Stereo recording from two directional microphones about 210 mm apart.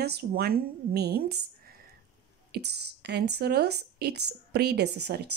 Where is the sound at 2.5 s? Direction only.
50° right (ahead or behind).